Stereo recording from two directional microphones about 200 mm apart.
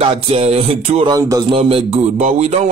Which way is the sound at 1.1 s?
20° right (ahead or behind).